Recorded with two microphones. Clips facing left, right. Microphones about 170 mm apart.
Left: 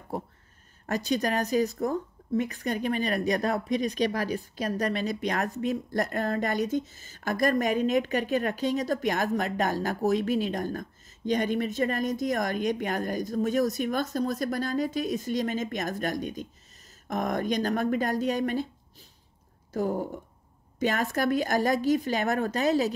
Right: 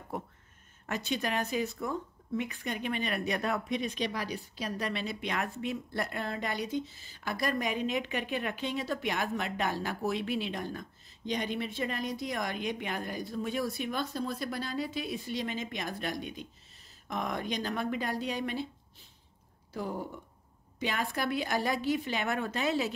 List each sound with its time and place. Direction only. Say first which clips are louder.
0.1 s a woman's voice: left 5 dB; 30° left (ahead or behind)